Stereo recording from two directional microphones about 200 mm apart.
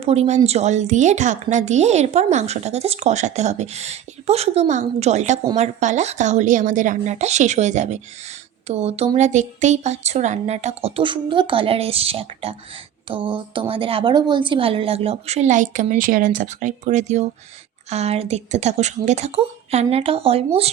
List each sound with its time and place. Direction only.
0.0 s speech: 30° right (ahead or behind)